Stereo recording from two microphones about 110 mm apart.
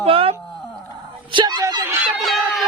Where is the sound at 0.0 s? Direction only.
60° right (ahead or behind).